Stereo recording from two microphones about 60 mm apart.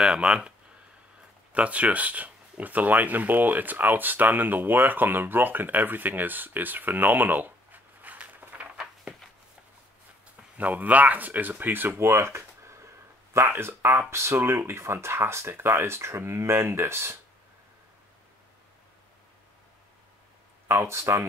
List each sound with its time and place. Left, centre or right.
0.0 s speech: centre
1.5 s speech: right
9.1 s a sound: centre
10.6 s speech: right
20.7 s speech: right